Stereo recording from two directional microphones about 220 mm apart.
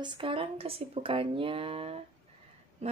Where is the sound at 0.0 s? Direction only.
20° right (ahead or behind).